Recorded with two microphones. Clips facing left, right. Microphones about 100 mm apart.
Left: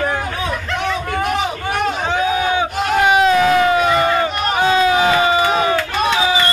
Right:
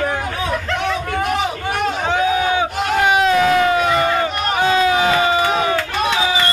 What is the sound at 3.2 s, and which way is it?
Crowd, 15° left (ahead or behind).